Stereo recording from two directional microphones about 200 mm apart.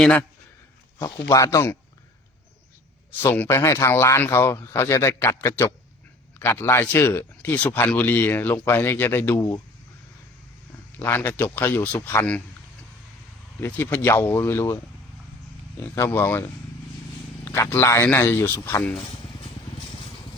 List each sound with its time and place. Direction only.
0.0 s a man's voice: 5° left (ahead or behind)
1.3 s speech: 15° left (ahead or behind)
3.2 s speech: 15° left (ahead or behind)
11.0 s speech: 10° left (ahead or behind)
13.6 s speech: 10° left (ahead or behind)
16.0 s speech: 10° left (ahead or behind)